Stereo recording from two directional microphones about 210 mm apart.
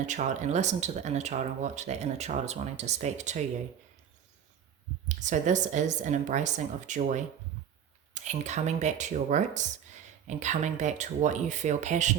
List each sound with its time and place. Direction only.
0.0 s speech: 35° right (ahead or behind)
5.0 s speech: 35° right (ahead or behind)